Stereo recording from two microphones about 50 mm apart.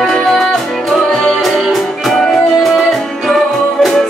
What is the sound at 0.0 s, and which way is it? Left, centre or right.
Music, centre.